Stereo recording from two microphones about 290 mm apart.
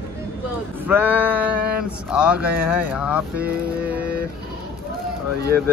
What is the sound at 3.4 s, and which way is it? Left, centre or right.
Speech, right.